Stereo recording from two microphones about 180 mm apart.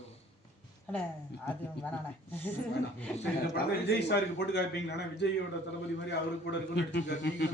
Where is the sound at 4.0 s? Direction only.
70° left (ahead or behind).